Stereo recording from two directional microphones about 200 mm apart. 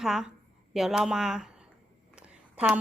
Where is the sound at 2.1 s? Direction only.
5° right (ahead or behind).